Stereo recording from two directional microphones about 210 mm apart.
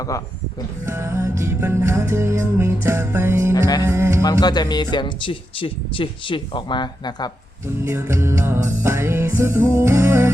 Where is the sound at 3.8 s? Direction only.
15° right (ahead or behind).